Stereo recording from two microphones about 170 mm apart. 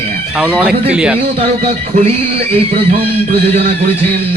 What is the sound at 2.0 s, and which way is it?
Speech, 35° right (ahead or behind).